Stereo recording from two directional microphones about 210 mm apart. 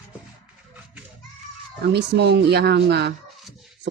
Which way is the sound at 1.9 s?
55° right (ahead or behind).